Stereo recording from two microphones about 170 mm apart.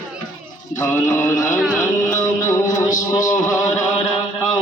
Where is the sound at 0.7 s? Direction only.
10° left (ahead or behind).